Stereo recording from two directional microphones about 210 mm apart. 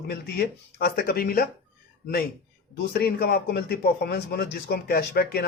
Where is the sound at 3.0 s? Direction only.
50° left (ahead or behind).